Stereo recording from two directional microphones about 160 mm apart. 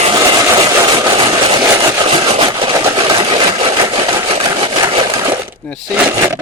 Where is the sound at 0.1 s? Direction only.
25° right (ahead or behind).